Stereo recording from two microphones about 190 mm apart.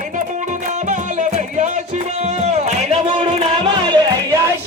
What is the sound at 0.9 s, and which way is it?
Music, 40° right (ahead or behind).